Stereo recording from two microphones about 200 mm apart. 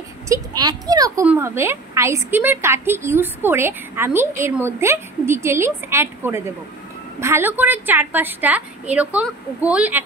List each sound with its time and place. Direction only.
0.3 s a child's voice: 20° right (ahead or behind)